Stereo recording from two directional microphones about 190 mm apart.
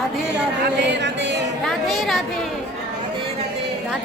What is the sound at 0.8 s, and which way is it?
Speech, 65° right (ahead or behind).